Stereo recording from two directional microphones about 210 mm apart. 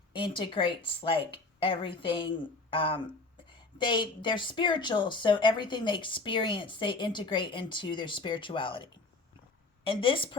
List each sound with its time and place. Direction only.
0.1 s a woman's voice: 25° left (ahead or behind)